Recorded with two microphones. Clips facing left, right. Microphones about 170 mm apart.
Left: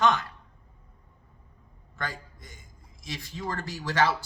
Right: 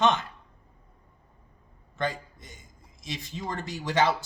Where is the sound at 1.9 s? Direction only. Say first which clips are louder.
Right 6 dB; 20° right (ahead or behind).